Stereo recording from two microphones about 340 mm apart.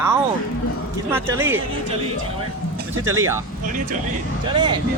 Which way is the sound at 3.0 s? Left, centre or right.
Centre.